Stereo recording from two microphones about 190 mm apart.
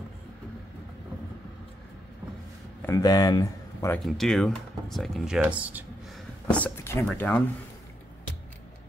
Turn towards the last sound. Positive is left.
turn(degrees=5)  # may be behind; listen again after turning